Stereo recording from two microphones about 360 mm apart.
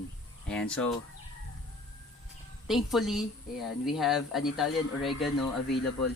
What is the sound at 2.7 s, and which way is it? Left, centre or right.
Speech, centre.